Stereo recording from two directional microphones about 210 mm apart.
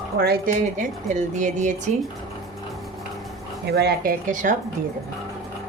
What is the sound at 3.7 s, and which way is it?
Speech, 50° right (ahead or behind).